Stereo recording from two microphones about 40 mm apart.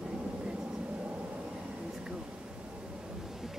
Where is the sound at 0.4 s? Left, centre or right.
Right.